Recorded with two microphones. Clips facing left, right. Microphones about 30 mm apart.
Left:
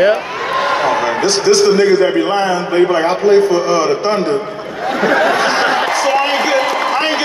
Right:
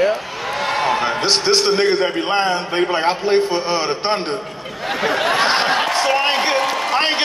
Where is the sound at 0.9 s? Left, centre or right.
Right.